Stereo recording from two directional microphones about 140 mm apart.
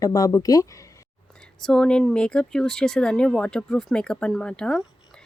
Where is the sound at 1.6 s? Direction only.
5° left (ahead or behind).